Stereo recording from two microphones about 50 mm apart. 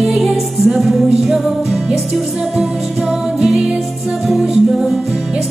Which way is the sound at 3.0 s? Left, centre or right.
Centre.